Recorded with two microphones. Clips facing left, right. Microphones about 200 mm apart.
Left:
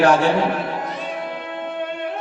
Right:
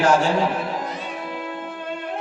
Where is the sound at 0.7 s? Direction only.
60° left (ahead or behind).